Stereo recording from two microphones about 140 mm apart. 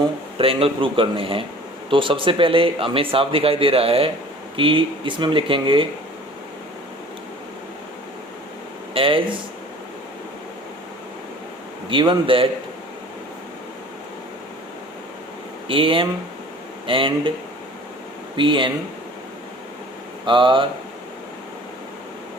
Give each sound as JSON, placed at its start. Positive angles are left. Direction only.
{"t": 0.3, "sound": "speech", "side_deg": -40}
{"t": 8.9, "sound": "speech", "side_deg": -40}
{"t": 11.9, "sound": "speech", "side_deg": -35}
{"t": 15.6, "sound": "speech", "side_deg": -40}
{"t": 18.3, "sound": "speech", "side_deg": -35}
{"t": 20.2, "sound": "speech", "side_deg": -35}